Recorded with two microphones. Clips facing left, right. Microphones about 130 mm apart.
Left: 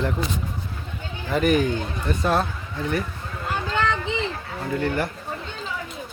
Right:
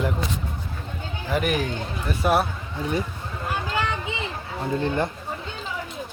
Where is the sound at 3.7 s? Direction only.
10° right (ahead or behind).